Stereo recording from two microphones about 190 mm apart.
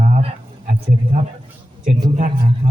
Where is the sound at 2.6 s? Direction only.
40° right (ahead or behind).